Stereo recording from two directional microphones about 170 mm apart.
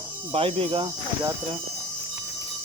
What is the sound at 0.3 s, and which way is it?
Speech, 35° right (ahead or behind).